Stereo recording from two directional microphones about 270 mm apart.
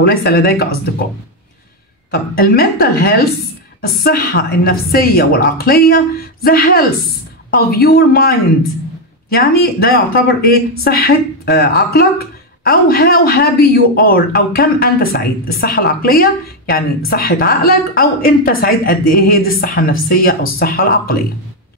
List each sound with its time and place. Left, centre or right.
0.0 s speech: left
2.0 s speech: left